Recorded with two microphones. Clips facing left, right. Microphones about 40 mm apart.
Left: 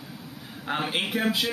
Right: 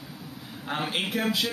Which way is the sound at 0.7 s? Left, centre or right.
Centre.